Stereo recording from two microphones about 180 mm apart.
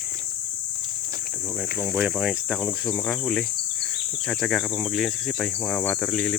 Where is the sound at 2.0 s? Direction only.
5° right (ahead or behind).